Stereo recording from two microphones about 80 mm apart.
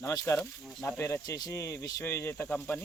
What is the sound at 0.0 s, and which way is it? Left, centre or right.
Speech, left.